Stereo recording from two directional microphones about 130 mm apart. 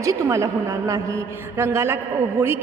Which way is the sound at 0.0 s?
25° right (ahead or behind).